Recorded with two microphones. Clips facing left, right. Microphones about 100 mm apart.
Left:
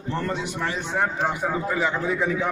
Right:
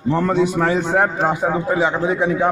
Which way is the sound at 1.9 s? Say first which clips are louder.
Right 6 dB; 80° right.